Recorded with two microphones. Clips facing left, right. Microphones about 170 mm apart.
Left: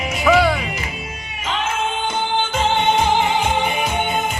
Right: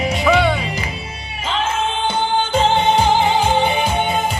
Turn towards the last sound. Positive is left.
turn(degrees=-35)  # may be behind; listen again after turning